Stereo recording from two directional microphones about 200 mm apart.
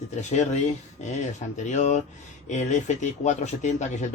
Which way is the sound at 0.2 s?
35° left (ahead or behind).